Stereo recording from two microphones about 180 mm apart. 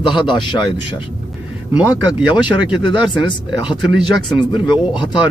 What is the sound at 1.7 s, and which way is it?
Speech, 10° right (ahead or behind).